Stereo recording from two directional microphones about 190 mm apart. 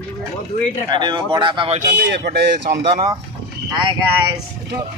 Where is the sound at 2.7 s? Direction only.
25° right (ahead or behind).